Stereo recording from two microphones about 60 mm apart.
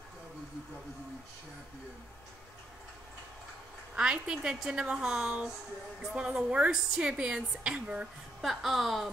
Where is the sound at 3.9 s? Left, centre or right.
Centre.